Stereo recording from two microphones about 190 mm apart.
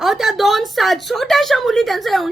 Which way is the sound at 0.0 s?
Centre (ahead or behind).